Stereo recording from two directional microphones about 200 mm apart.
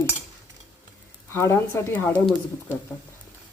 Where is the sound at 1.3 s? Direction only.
10° left (ahead or behind).